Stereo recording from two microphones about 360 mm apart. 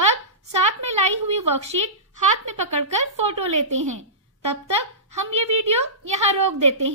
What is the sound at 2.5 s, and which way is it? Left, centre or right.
Speech, right.